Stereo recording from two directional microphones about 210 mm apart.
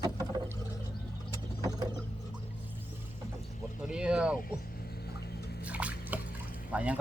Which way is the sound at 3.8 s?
5° right (ahead or behind).